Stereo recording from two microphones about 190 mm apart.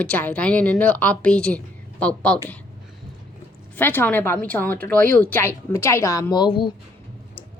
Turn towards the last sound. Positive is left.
turn(degrees=25)  # may be behind; listen again after turning